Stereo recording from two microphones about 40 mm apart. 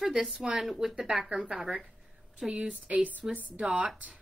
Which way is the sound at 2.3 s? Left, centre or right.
Right.